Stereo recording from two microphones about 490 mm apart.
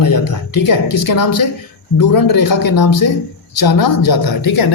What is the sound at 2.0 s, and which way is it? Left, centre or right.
Speech, left.